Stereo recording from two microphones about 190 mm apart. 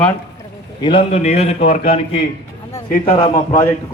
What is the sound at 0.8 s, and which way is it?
A man's voice, 25° left (ahead or behind).